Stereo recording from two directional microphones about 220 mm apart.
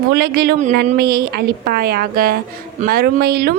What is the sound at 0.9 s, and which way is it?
A woman's voice, 45° right (ahead or behind).